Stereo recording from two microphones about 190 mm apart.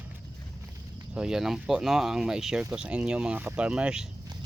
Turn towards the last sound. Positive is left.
turn(degrees=-5)  # may be behind; listen again after turning